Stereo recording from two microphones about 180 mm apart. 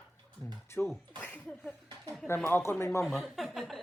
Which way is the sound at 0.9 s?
10° left (ahead or behind).